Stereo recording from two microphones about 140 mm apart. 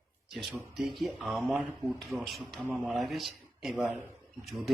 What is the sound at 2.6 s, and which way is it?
Speech, 15° right (ahead or behind).